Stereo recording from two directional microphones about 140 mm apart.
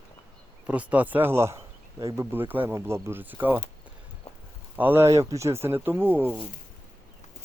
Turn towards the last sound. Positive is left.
turn(degrees=-15)  # may be behind; listen again after turning